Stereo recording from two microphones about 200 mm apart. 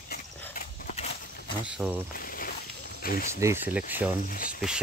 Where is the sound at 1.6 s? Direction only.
5° right (ahead or behind).